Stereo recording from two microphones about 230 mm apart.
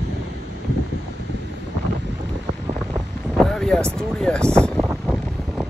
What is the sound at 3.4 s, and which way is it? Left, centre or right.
Vehicle, centre.